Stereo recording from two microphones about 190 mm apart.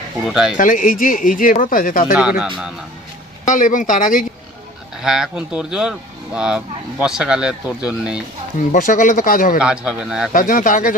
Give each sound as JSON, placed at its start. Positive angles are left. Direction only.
{"t": 0.3, "sound": "speech", "side_deg": 0}
{"t": 0.5, "sound": "speech", "side_deg": 45}
{"t": 3.4, "sound": "speech", "side_deg": 40}
{"t": 5.0, "sound": "speech", "side_deg": 0}
{"t": 8.7, "sound": "speech", "side_deg": 45}
{"t": 9.6, "sound": "speech", "side_deg": -5}
{"t": 10.3, "sound": "speech", "side_deg": 45}